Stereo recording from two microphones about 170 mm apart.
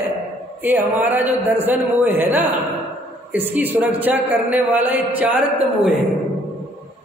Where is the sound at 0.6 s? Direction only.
10° right (ahead or behind).